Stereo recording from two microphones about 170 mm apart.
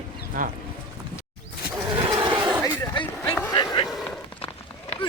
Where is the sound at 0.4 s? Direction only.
55° right (ahead or behind).